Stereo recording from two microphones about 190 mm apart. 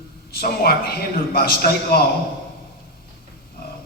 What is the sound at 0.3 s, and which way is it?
A man's voice, 55° left (ahead or behind).